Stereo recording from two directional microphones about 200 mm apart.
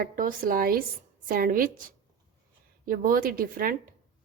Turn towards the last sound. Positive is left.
turn(degrees=-45)  # may be behind; listen again after turning